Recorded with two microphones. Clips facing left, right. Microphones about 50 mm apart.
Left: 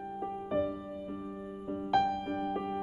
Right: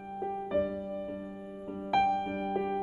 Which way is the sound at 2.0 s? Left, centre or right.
Centre.